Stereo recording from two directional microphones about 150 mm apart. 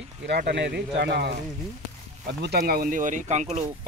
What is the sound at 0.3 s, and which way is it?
Speech, 90° right.